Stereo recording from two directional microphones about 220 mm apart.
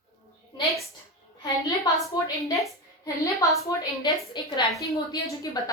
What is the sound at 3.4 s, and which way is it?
A woman's voice, 15° left (ahead or behind).